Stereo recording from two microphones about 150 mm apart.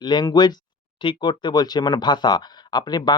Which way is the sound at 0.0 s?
30° left (ahead or behind).